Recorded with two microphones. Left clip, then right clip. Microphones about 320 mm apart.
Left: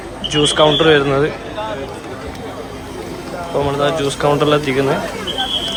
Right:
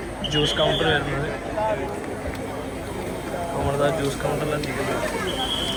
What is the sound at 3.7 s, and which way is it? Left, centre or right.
Speech, centre.